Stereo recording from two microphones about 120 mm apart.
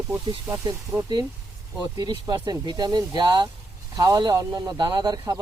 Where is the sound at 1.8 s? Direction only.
35° right (ahead or behind).